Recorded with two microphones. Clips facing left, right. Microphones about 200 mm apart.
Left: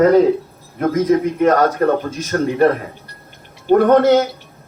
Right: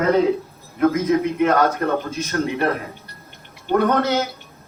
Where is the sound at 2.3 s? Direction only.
40° left (ahead or behind).